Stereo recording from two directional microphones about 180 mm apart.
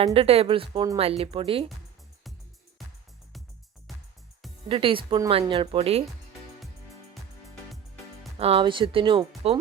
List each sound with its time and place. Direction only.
0.0 s speech: 35° right (ahead or behind)
3.9 s music: centre (ahead or behind)
4.7 s speech: 30° right (ahead or behind)
8.4 s speech: 35° right (ahead or behind)